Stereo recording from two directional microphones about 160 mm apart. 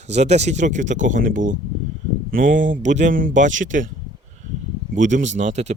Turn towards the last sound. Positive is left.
turn(degrees=-45)  # may be behind; listen again after turning